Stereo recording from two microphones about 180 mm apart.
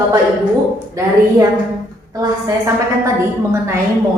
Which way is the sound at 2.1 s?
20° right (ahead or behind).